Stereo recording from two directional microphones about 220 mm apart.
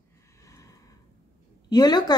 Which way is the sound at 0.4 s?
15° left (ahead or behind).